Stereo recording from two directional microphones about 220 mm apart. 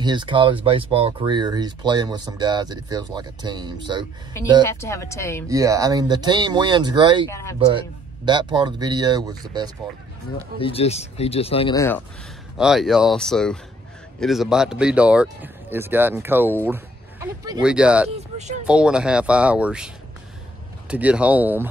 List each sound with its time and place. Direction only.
0.0 s speech: 20° right (ahead or behind)
4.6 s speech: 10° left (ahead or behind)
5.5 s speech: 15° right (ahead or behind)
7.2 s speech: 15° left (ahead or behind)
8.3 s speech: 20° right (ahead or behind)
10.6 s speech: 25° left (ahead or behind)
11.7 s speech: 15° left (ahead or behind)
12.5 s speech: centre (ahead or behind)
18.1 s vehicle: 30° right (ahead or behind)
18.7 s speech: 5° right (ahead or behind)
20.9 s speech: 5° right (ahead or behind)